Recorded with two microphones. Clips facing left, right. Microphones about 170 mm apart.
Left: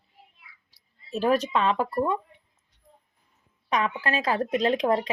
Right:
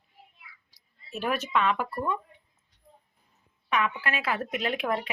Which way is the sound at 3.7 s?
35° left (ahead or behind).